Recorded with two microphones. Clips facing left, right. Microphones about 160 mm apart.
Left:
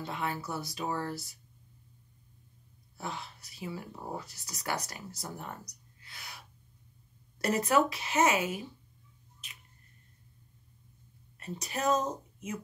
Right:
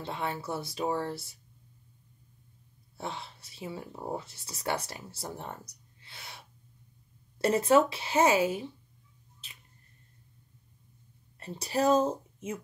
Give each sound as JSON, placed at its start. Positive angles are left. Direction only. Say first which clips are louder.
{"t": 0.0, "sound": "speech", "louder": "right 1 dB", "side_deg": -30}
{"t": 3.0, "sound": "speech", "louder": "right 1 dB", "side_deg": -30}
{"t": 11.3, "sound": "speech", "louder": "right 7 dB", "side_deg": -30}